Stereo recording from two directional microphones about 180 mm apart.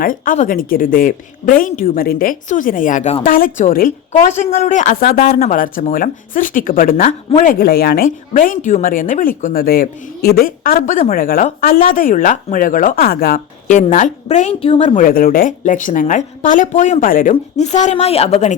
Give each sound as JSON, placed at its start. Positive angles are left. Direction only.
{"t": 0.0, "sound": "speech", "side_deg": 50}